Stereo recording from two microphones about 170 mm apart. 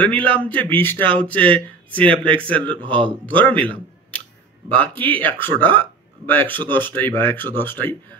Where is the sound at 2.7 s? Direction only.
30° right (ahead or behind).